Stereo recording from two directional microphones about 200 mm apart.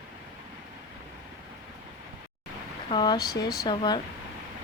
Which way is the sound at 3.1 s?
50° left (ahead or behind).